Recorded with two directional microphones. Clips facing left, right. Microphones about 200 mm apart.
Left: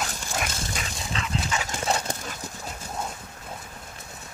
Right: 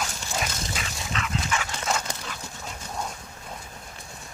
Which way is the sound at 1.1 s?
30° left (ahead or behind).